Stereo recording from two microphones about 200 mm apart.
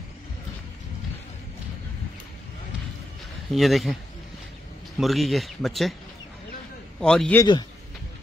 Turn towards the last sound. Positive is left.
turn(degrees=5)  # may be behind; listen again after turning